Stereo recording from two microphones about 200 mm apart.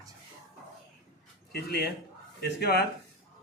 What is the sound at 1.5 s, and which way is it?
Speech, 50° left (ahead or behind).